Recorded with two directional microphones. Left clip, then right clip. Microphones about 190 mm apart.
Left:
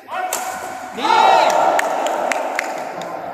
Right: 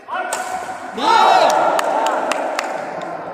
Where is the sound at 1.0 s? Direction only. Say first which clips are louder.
Right 1 dB; 60° right (ahead or behind).